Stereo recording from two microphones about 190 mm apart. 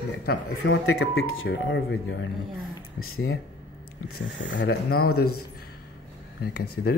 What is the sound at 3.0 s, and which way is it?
Speech, 90° left.